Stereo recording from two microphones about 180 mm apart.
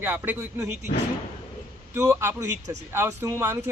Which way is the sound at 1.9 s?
15° right (ahead or behind).